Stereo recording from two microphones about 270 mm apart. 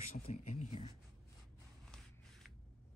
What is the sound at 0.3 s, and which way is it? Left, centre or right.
Speech, left.